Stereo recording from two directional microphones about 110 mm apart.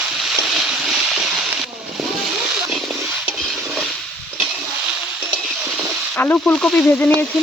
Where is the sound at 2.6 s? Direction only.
5° right (ahead or behind).